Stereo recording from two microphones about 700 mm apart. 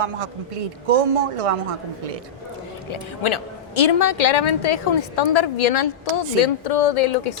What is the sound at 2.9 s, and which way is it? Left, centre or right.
A woman's voice, left.